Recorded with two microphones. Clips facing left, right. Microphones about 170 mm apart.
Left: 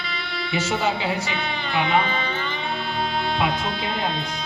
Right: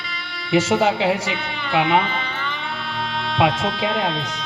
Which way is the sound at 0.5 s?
85° right.